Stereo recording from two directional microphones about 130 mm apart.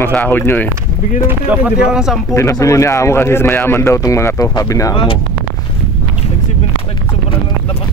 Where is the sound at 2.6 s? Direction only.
25° left (ahead or behind).